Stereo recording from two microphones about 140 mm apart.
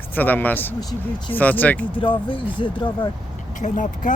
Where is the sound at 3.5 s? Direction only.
65° left (ahead or behind).